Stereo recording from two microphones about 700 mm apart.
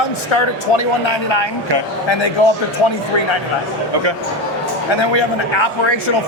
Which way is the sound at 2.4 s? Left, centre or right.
Left.